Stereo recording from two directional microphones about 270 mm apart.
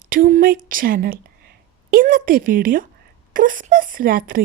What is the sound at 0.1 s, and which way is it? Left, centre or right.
Speech, right.